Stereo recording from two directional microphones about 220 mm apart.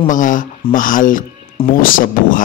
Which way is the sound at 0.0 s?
35° left (ahead or behind).